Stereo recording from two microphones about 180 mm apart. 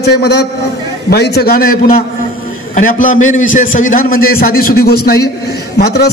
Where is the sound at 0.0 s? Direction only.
65° left (ahead or behind).